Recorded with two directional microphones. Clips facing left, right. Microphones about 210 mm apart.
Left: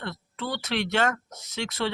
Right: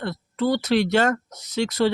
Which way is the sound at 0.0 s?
40° right (ahead or behind).